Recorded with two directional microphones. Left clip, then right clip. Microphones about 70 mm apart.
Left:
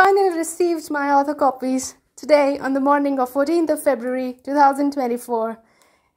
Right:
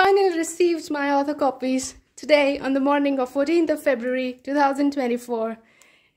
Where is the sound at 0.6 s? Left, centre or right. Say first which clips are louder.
Left 1 dB; centre.